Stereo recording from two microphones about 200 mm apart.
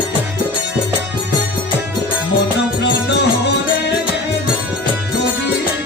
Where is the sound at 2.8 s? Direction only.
60° left (ahead or behind).